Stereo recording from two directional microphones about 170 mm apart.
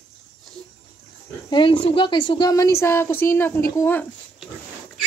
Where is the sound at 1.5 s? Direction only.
30° left (ahead or behind); by 4.0 s 10° left (ahead or behind).